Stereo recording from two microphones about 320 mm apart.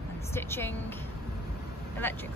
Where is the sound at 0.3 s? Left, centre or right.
Centre.